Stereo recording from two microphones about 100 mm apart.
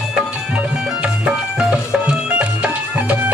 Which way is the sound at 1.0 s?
10° right (ahead or behind).